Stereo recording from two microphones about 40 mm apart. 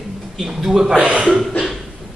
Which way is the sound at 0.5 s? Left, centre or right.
Centre.